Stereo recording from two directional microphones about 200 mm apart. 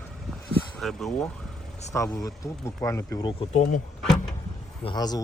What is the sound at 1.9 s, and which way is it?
Speech, 15° left (ahead or behind).